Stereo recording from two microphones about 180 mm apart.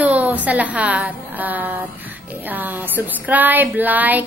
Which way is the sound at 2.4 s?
10° right (ahead or behind).